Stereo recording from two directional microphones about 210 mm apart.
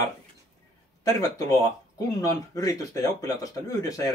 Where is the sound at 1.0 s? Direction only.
15° left (ahead or behind).